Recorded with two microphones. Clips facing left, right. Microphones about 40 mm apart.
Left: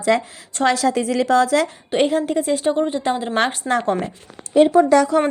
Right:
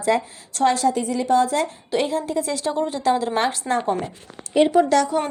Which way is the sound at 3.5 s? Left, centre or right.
Left.